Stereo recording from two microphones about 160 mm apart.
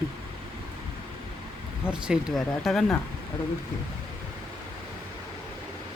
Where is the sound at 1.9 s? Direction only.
5° right (ahead or behind).